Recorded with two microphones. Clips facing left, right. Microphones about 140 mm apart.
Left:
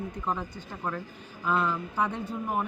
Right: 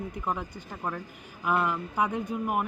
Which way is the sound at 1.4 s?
15° right (ahead or behind).